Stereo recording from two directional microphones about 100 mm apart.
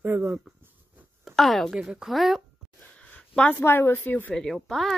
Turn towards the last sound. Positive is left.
turn(degrees=5)  # may be behind; listen again after turning